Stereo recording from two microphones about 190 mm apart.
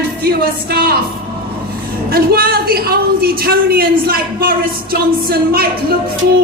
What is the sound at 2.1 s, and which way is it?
A woman's voice, 55° right (ahead or behind).